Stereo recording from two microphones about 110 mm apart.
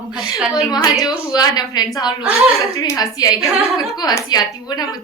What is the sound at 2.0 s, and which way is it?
Speech, 5° right (ahead or behind).